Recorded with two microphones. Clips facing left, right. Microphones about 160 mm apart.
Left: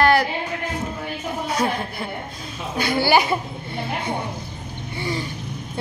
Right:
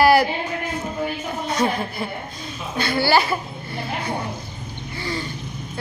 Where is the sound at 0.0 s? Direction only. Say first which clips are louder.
Right 2 dB; 5° right (ahead or behind).